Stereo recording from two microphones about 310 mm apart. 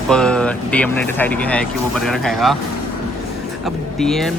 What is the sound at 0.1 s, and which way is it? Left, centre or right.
Speech, centre.